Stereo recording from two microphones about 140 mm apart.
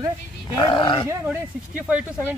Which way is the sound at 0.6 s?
35° left (ahead or behind).